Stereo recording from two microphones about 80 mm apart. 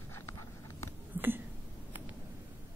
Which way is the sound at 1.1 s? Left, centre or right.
Right.